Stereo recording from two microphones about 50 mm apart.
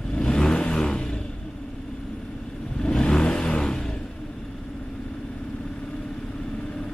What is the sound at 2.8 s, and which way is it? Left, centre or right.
Vehicle, centre.